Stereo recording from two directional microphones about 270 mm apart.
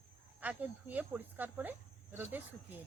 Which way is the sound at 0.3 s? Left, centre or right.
Centre.